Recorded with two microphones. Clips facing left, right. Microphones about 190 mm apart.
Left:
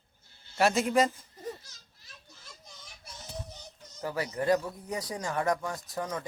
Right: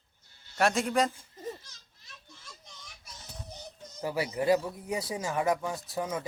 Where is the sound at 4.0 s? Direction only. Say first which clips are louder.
Right 2 dB; 10° right (ahead or behind).